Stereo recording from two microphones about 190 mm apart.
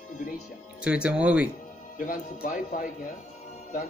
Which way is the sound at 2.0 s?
45° left (ahead or behind).